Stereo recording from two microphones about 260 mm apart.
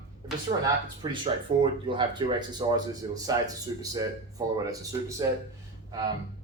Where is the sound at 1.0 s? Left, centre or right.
Centre.